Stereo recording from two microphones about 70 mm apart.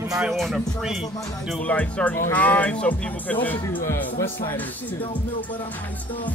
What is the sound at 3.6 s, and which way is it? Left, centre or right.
Speech, left.